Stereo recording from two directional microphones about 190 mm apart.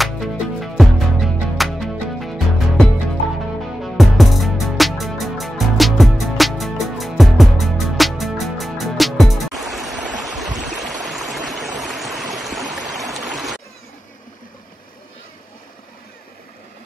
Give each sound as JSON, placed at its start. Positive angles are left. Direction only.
{"t": 0.0, "sound": "music", "side_deg": 0}
{"t": 11.8, "sound": "stream", "side_deg": 0}